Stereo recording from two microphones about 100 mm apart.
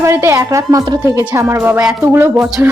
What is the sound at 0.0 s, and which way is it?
A woman's voice, 30° right (ahead or behind).